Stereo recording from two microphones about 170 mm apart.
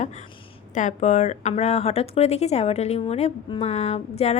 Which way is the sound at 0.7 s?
45° left (ahead or behind).